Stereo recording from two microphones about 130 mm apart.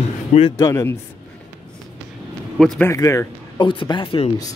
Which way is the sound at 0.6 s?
25° left (ahead or behind).